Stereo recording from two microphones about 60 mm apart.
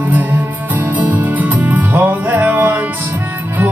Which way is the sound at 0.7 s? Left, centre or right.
Right.